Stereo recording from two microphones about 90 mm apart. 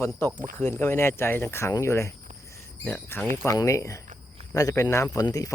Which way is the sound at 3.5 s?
35° left (ahead or behind).